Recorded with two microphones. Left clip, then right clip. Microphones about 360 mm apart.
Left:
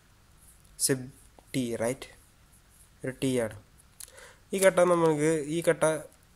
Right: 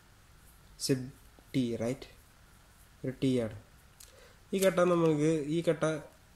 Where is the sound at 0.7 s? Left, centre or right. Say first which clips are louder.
Left 3 dB; centre.